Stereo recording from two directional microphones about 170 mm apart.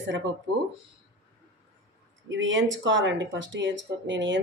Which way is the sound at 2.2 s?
90° right.